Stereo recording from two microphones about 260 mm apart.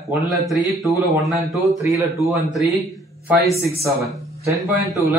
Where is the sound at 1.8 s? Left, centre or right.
Centre.